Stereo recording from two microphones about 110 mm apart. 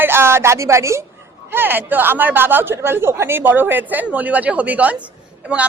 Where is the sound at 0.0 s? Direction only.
20° right (ahead or behind).